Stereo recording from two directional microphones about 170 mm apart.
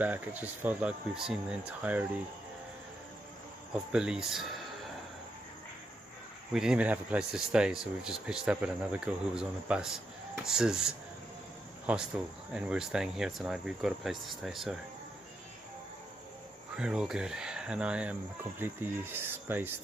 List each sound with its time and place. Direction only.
0.0 s speech: 10° right (ahead or behind)
3.7 s speech: 5° right (ahead or behind)
6.5 s speech: 5° right (ahead or behind)
16.7 s speech: 5° right (ahead or behind)